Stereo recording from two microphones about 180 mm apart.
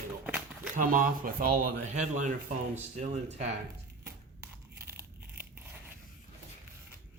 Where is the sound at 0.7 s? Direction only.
50° right (ahead or behind).